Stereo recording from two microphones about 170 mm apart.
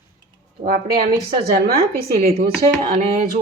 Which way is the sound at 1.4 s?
65° right (ahead or behind).